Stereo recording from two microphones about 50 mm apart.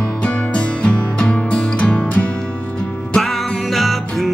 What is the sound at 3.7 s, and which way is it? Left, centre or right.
Music, centre.